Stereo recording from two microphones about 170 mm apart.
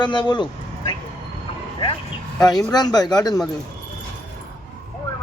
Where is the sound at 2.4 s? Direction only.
25° left (ahead or behind).